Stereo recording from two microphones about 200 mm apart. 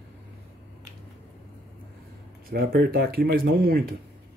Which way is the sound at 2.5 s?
50° right (ahead or behind).